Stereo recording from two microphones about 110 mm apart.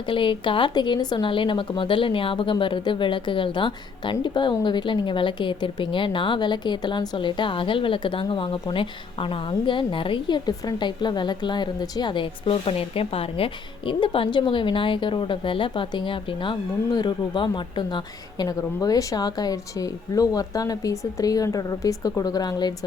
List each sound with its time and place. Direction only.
0.1 s speech: 50° left (ahead or behind)
18.4 s a woman's voice: 30° left (ahead or behind)